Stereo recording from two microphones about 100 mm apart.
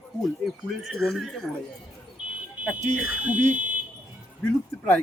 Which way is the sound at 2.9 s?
15° right (ahead or behind).